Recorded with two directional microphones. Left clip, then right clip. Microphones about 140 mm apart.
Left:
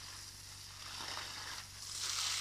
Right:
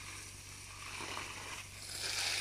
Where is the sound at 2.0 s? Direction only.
40° right (ahead or behind).